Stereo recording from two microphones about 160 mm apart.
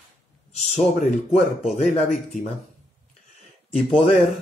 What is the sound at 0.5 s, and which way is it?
Speech, 50° left (ahead or behind).